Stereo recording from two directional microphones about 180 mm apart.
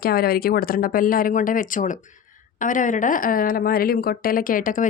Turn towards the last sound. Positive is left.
turn(degrees=50)  # may be behind; listen again after turning